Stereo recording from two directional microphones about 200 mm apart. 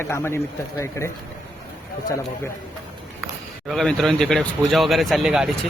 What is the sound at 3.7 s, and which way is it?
Speech, centre (ahead or behind).